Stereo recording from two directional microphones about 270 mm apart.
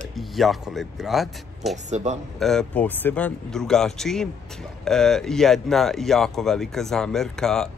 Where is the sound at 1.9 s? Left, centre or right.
Right.